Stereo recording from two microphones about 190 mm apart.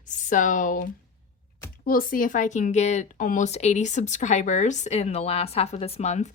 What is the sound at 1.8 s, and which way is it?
Speech, 50° left (ahead or behind).